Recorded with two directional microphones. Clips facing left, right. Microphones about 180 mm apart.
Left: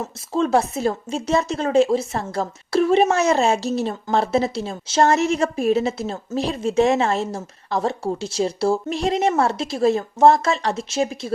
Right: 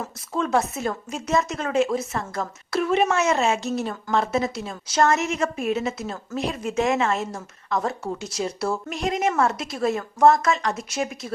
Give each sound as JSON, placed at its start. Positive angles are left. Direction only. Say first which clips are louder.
{"t": 0.0, "sound": "a woman's voice", "louder": "left 5 dB", "side_deg": 30}